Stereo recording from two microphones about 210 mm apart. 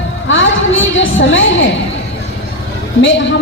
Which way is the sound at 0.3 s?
65° left (ahead or behind).